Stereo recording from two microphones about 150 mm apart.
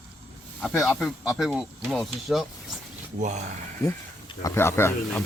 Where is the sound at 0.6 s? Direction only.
Centre (ahead or behind).